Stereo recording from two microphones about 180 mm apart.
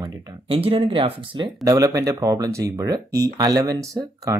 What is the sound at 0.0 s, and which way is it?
Speech, 30° right (ahead or behind).